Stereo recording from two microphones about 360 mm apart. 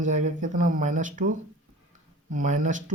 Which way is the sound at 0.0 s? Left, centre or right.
Centre.